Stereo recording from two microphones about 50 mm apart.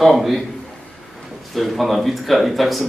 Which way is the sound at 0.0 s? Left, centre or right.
Centre.